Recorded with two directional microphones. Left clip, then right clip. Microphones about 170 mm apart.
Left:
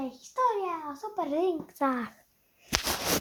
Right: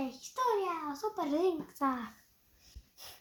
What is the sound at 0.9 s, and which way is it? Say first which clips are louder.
Child singing: left 3 dB; 40° left (ahead or behind).